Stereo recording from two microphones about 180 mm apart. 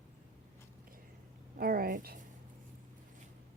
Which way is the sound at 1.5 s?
55° right (ahead or behind).